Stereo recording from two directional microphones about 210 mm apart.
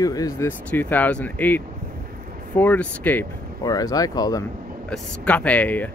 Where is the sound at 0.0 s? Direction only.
15° left (ahead or behind).